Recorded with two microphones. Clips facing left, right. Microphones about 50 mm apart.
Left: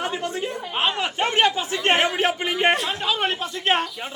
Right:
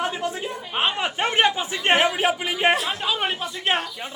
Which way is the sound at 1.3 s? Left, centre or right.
Centre.